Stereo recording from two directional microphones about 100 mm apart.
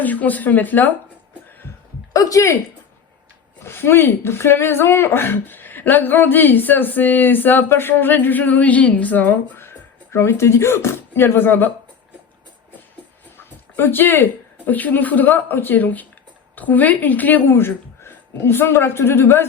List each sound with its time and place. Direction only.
0.0 s a woman's voice: 15° left (ahead or behind)
2.1 s speech: 35° left (ahead or behind)
3.6 s speech: 25° left (ahead or behind)
13.3 s a sound: 20° left (ahead or behind)
14.7 s a woman's voice: 15° left (ahead or behind)